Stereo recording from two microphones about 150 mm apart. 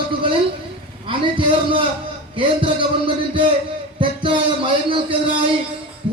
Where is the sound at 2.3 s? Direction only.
35° right (ahead or behind).